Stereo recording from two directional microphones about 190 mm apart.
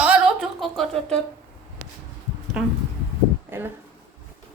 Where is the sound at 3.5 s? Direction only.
10° right (ahead or behind).